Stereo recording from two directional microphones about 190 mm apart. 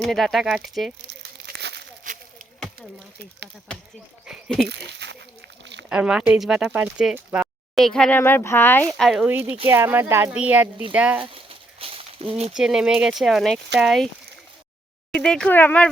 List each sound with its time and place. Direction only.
0.0 s speech: centre (ahead or behind)
1.5 s crumpling: 65° right (ahead or behind)
2.0 s a sound: 45° right (ahead or behind)
4.3 s speech: 5° right (ahead or behind)
4.7 s speech: 65° right (ahead or behind)
5.9 s speech: 5° right (ahead or behind)
11.2 s a sound: 30° right (ahead or behind)
12.5 s speech: 5° right (ahead or behind)
15.1 s speech: 5° left (ahead or behind)